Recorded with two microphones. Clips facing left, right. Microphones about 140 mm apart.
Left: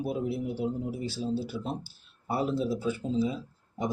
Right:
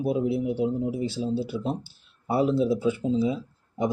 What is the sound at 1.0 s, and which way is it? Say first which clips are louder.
Speech: right 4 dB; 20° right (ahead or behind).